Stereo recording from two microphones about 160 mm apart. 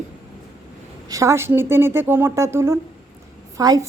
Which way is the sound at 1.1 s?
20° right (ahead or behind).